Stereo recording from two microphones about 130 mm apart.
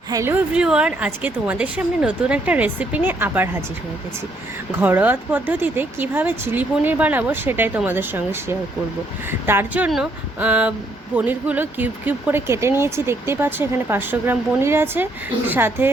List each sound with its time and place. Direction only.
0.1 s speech: 20° right (ahead or behind)
0.5 s speech: 5° right (ahead or behind)
4.8 s speech: 15° right (ahead or behind)